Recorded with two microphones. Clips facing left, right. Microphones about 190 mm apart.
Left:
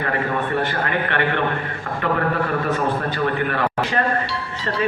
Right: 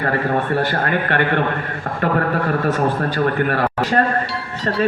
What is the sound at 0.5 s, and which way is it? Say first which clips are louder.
Speech: right 3 dB; 40° right (ahead or behind).